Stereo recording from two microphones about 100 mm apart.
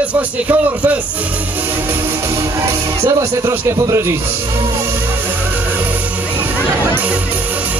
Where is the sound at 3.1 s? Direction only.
35° right (ahead or behind).